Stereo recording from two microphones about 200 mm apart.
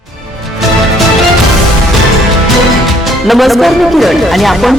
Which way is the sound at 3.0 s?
Centre (ahead or behind).